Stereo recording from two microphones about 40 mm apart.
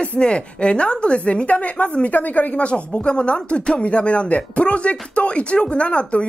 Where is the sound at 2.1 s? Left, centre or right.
Left.